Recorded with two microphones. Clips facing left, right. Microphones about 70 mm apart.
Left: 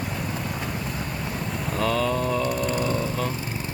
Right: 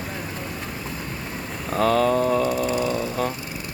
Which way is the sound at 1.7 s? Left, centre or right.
Right.